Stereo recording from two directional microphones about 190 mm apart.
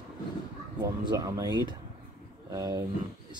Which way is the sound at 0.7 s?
20° right (ahead or behind).